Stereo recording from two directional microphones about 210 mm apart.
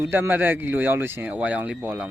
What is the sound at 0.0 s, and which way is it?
Speech, 10° right (ahead or behind).